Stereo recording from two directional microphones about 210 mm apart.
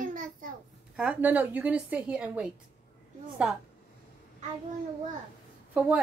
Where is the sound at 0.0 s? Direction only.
40° right (ahead or behind).